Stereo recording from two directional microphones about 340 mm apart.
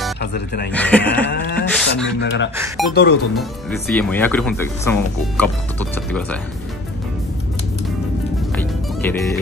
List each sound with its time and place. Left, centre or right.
0.2 s speech: left
0.7 s speech: centre
1.2 s a sound: left
1.7 s speech: centre
2.9 s a sound: left
3.9 s speech: centre
8.5 s music: centre